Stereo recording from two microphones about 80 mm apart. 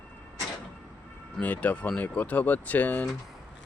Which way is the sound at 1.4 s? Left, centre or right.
Centre.